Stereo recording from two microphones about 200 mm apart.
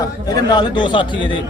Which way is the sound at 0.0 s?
20° left (ahead or behind).